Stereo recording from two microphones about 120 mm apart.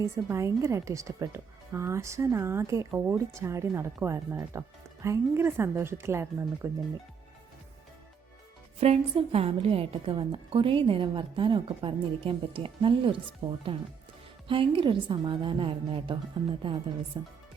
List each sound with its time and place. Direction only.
0.0 s speech: 25° right (ahead or behind)
8.8 s a woman's voice: 55° right (ahead or behind)
13.4 s speech: 60° right (ahead or behind)
14.4 s a woman's voice: 45° right (ahead or behind)
17.2 s speech: 35° right (ahead or behind)